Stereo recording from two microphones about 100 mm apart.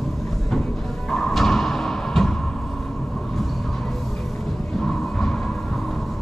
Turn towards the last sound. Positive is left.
turn(degrees=5)  # may be behind; listen again after turning